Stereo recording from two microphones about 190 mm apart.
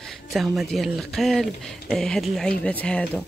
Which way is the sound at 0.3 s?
Centre (ahead or behind).